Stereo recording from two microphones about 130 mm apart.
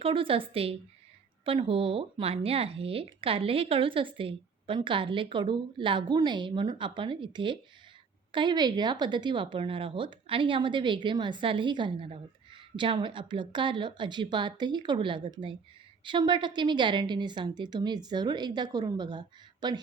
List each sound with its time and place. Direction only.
0.0 s a woman's voice: 45° right (ahead or behind)